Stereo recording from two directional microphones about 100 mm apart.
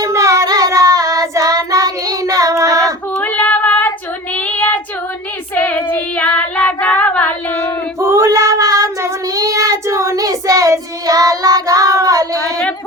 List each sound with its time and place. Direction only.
0.0 s child singing: 30° right (ahead or behind)
2.8 s female singing: 15° left (ahead or behind)
4.4 s child singing: 15° left (ahead or behind)
7.9 s child singing: 25° right (ahead or behind)